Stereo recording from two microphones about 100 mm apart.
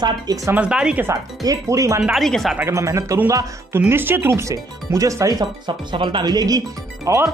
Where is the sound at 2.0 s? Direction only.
Centre (ahead or behind).